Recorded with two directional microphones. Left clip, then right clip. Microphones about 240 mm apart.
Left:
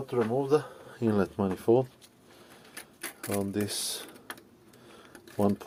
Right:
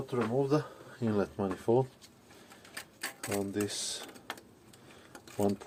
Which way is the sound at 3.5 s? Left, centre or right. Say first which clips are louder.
Left 2 dB; left.